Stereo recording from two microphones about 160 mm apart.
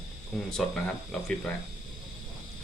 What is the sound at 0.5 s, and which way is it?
Speech, 5° left (ahead or behind).